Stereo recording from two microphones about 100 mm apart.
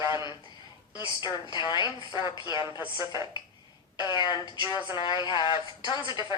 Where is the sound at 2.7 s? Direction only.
25° right (ahead or behind).